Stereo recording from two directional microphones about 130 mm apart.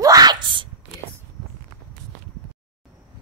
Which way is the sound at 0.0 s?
30° right (ahead or behind).